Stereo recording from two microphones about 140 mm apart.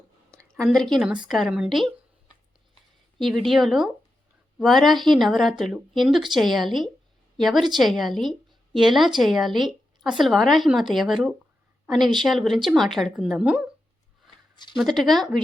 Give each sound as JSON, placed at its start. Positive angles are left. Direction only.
{"t": 0.5, "sound": "a woman's voice", "side_deg": 0}
{"t": 3.2, "sound": "a woman's voice", "side_deg": 0}
{"t": 14.5, "sound": "a sound", "side_deg": 30}
{"t": 14.8, "sound": "a woman's voice", "side_deg": 0}